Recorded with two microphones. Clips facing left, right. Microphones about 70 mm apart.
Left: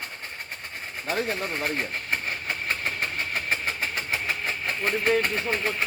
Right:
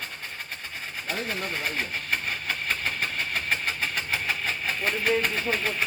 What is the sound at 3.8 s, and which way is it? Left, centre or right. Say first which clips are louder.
Vehicle: even; centre.